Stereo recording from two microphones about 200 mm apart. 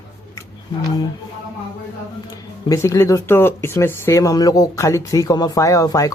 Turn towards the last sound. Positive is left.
turn(degrees=15)  # may be behind; listen again after turning